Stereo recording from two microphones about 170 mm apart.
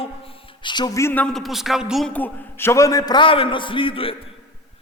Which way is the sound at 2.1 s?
10° left (ahead or behind).